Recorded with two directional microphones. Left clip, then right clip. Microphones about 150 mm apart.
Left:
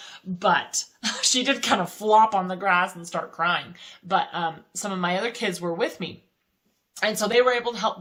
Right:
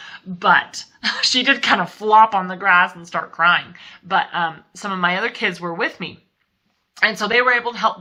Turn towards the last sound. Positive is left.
turn(degrees=40)  # may be behind; listen again after turning